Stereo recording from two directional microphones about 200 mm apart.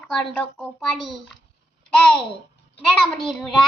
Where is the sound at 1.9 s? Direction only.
5° left (ahead or behind).